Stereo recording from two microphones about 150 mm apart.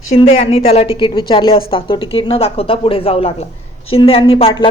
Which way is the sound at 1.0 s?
35° left (ahead or behind).